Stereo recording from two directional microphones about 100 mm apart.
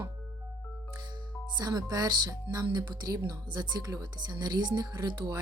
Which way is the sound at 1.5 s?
40° right (ahead or behind).